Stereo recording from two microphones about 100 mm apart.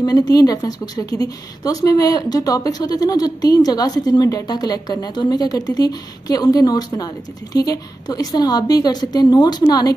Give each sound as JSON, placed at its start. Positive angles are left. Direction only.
{"t": 0.0, "sound": "speech", "side_deg": 40}